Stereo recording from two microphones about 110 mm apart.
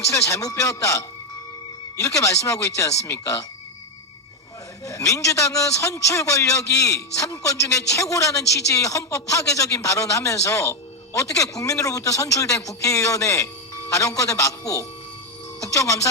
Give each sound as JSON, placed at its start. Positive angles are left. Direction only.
{"t": 0.0, "sound": "a man's voice", "side_deg": 25}
{"t": 4.9, "sound": "a man's voice", "side_deg": 30}